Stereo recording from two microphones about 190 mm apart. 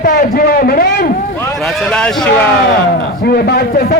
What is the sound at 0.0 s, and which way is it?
A man's voice, 50° left (ahead or behind).